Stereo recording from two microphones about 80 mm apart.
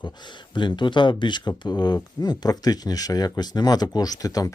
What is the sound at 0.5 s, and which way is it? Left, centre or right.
Speech, left.